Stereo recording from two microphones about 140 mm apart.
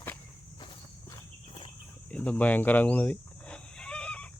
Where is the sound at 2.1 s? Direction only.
10° left (ahead or behind).